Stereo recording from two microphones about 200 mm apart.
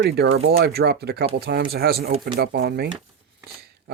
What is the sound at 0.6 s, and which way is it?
Speech, 50° right (ahead or behind).